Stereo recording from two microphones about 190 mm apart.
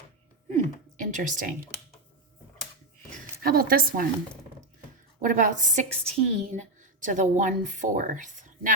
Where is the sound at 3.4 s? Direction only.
50° right (ahead or behind).